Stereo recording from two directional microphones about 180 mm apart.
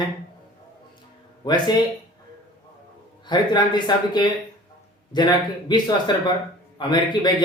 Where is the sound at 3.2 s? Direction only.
25° left (ahead or behind).